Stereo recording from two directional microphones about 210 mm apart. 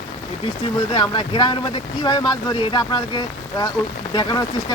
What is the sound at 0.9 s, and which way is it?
Speech, 20° left (ahead or behind).